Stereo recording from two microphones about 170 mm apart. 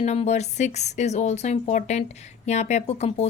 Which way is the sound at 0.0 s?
40° left (ahead or behind).